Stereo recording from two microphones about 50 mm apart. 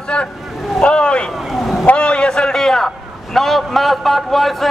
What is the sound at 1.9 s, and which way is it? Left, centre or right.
A man's voice, centre.